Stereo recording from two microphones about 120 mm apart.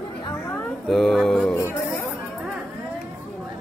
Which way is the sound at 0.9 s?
Centre (ahead or behind).